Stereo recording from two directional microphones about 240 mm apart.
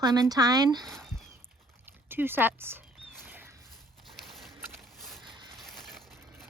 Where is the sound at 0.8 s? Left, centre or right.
Centre.